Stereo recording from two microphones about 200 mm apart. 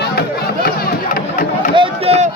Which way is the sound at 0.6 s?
50° left (ahead or behind).